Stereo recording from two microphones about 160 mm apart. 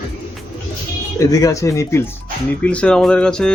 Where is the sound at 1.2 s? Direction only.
20° left (ahead or behind); by 3.5 s 5° left (ahead or behind).